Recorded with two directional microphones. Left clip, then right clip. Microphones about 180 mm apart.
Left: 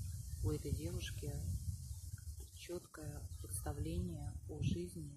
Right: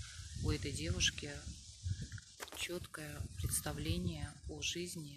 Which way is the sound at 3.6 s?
5° right (ahead or behind).